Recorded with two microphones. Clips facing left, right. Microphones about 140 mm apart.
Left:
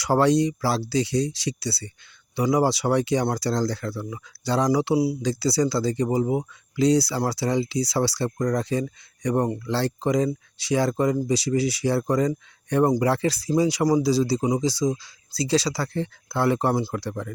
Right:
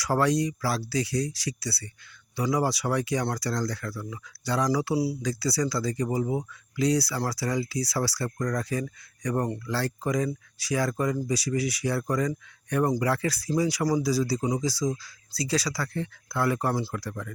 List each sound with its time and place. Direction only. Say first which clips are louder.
0.0 s speech: left 5 dB; 25° left (ahead or behind)